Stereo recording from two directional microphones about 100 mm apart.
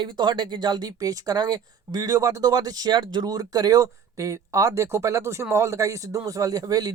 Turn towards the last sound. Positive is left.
turn(degrees=-40)  # may be behind; listen again after turning